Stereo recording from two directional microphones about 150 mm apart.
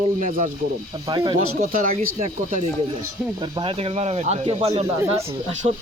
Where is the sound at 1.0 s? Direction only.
30° right (ahead or behind).